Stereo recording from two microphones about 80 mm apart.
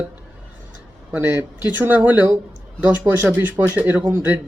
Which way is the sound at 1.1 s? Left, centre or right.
Centre.